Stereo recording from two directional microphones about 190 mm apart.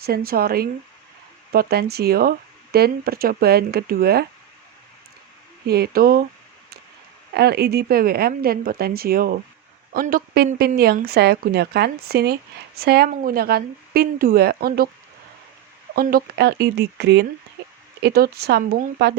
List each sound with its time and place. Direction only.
0.0 s a woman's voice: 55° right (ahead or behind)
5.6 s a woman's voice: 55° right (ahead or behind)
7.3 s a woman's voice: 60° right (ahead or behind)
16.0 s a woman's voice: 50° right (ahead or behind)
17.6 s a sound: 65° right (ahead or behind)
18.0 s a woman's voice: 55° right (ahead or behind)